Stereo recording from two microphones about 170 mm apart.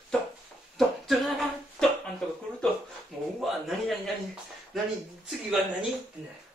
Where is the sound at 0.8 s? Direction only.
Centre (ahead or behind).